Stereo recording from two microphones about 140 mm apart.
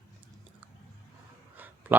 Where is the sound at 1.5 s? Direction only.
15° right (ahead or behind).